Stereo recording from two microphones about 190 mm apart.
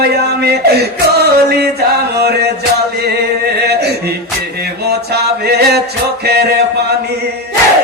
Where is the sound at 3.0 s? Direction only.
60° right (ahead or behind).